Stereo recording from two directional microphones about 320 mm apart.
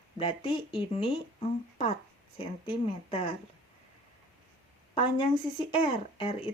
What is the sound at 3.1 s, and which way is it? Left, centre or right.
Speech, centre.